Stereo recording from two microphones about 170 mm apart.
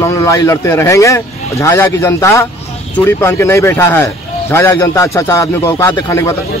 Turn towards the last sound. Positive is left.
turn(degrees=15)  # may be behind; listen again after turning